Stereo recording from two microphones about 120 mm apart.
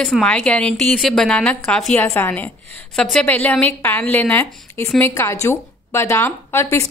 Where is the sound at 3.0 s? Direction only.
5° left (ahead or behind).